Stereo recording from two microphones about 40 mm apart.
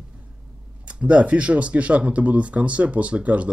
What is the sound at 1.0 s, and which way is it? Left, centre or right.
Speech, right.